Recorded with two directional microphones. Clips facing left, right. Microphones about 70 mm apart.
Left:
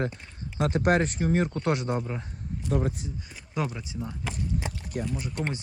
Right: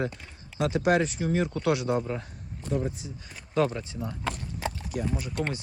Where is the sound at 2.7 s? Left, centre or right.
Left.